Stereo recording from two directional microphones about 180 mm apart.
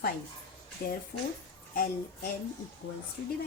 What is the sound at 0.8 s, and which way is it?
Speech, 60° left (ahead or behind).